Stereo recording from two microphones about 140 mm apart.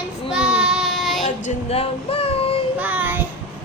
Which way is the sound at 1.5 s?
45° left (ahead or behind).